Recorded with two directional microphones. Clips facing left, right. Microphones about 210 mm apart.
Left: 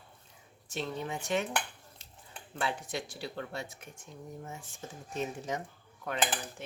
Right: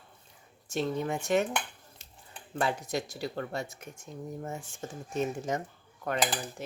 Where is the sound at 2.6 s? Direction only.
40° right (ahead or behind).